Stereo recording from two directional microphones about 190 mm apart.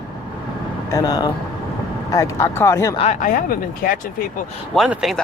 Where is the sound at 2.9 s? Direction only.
35° left (ahead or behind).